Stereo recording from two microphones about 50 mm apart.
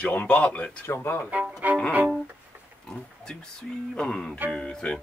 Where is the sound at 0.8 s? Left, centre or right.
Left.